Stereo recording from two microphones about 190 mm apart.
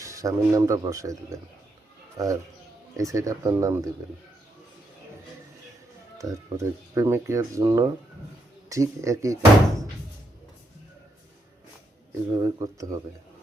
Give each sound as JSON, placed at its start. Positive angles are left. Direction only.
{"t": 0.0, "sound": "speech", "side_deg": -15}
{"t": 6.1, "sound": "speech", "side_deg": -15}
{"t": 12.4, "sound": "speech", "side_deg": -20}